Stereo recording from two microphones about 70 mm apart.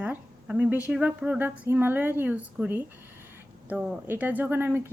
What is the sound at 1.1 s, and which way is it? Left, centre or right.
Speech, centre.